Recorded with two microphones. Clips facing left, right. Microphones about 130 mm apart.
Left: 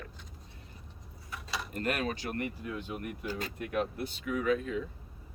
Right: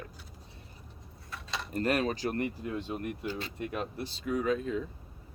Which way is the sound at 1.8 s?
35° right (ahead or behind).